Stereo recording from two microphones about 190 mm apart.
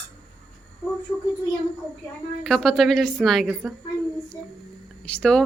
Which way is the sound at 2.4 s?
Centre (ahead or behind).